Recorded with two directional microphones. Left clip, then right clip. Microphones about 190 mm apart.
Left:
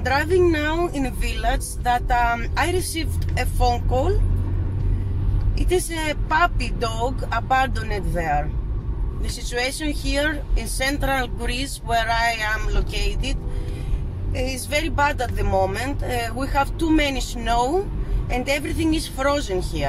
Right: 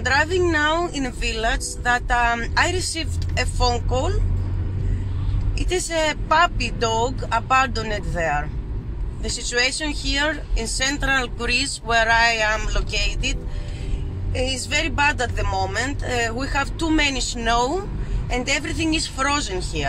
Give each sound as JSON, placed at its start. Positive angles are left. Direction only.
{"t": 0.0, "sound": "speech", "side_deg": 5}
{"t": 5.7, "sound": "speech", "side_deg": 0}